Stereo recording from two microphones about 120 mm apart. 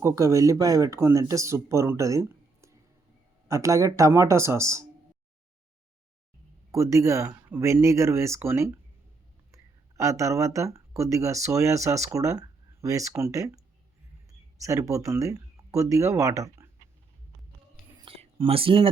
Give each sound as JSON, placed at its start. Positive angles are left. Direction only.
{"t": 0.0, "sound": "speech", "side_deg": -25}
{"t": 6.7, "sound": "speech", "side_deg": -25}
{"t": 10.0, "sound": "speech", "side_deg": -25}
{"t": 14.6, "sound": "speech", "side_deg": -25}
{"t": 18.0, "sound": "speech", "side_deg": -50}